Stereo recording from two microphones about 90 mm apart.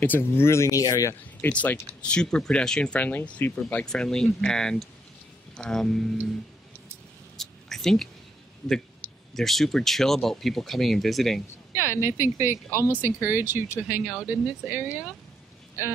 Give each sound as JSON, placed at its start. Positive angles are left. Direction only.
{"t": 0.0, "sound": "speech", "side_deg": 25}
{"t": 1.4, "sound": "speech", "side_deg": 20}
{"t": 7.3, "sound": "a sound", "side_deg": 5}
{"t": 9.3, "sound": "speech", "side_deg": 5}
{"t": 11.7, "sound": "speech", "side_deg": -25}